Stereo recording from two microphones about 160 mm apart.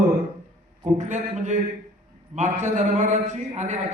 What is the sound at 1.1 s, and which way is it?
A man's voice, 50° right (ahead or behind).